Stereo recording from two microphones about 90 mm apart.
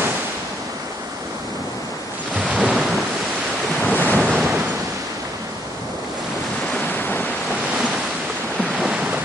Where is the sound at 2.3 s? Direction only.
15° right (ahead or behind).